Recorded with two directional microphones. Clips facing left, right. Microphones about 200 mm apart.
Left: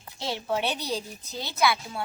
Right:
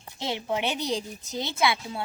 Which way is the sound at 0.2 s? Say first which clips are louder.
Even; 20° right (ahead or behind).